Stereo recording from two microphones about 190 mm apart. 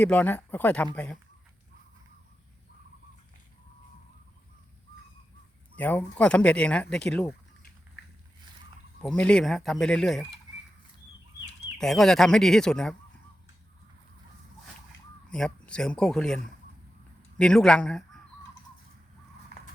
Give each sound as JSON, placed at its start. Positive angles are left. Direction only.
{"t": 0.0, "sound": "speech", "side_deg": 10}
{"t": 5.7, "sound": "speech", "side_deg": 10}
{"t": 9.0, "sound": "speech", "side_deg": 5}
{"t": 11.8, "sound": "speech", "side_deg": 0}
{"t": 15.3, "sound": "speech", "side_deg": 5}